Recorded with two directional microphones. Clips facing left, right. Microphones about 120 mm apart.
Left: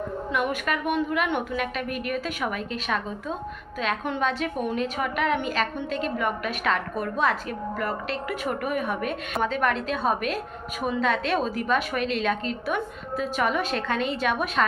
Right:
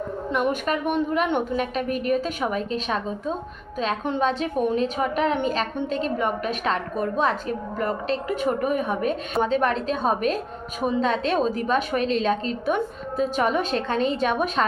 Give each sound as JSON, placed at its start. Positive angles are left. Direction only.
{"t": 0.3, "sound": "a woman's voice", "side_deg": -35}